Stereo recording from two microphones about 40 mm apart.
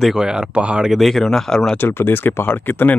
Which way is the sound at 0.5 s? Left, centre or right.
Right.